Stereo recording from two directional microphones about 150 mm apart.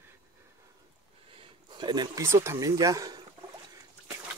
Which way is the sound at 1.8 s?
30° right (ahead or behind).